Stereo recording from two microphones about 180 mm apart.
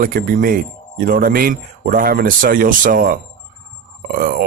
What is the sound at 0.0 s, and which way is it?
Speech, 55° right (ahead or behind).